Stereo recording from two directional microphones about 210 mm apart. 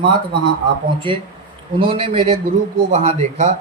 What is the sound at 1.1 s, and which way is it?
Speech, 25° right (ahead or behind).